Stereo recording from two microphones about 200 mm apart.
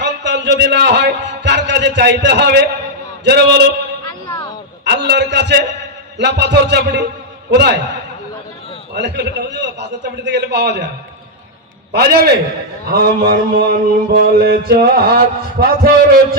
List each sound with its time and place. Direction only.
0.0 s a man's voice: 60° right (ahead or behind)
4.9 s a man's voice: 55° right (ahead or behind)
9.0 s a man's voice: 60° right (ahead or behind)
11.9 s a man's voice: 55° right (ahead or behind)
12.9 s mantra: 50° right (ahead or behind)